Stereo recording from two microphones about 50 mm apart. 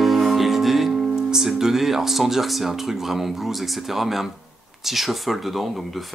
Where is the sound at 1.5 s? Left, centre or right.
Centre.